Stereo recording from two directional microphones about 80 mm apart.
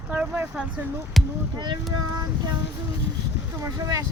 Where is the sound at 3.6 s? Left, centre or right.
Right.